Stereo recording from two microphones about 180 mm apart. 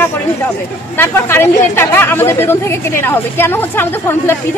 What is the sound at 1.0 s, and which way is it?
Speech, 15° left (ahead or behind).